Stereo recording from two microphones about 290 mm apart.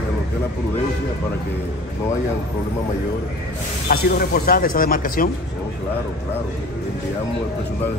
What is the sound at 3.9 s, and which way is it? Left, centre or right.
Speech, left.